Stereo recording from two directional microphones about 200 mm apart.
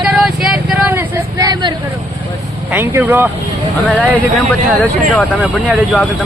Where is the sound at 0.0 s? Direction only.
5° right (ahead or behind); by 1.7 s 20° right (ahead or behind).